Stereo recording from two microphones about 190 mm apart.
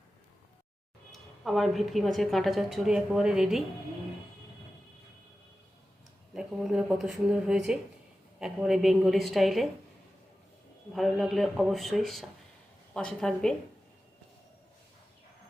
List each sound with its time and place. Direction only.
1.1 s a woman's voice: centre (ahead or behind)
6.3 s a woman's voice: centre (ahead or behind)
10.9 s a woman's voice: centre (ahead or behind)